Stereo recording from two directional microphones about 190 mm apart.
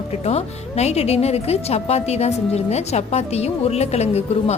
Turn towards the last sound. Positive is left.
turn(degrees=35)  # may be behind; listen again after turning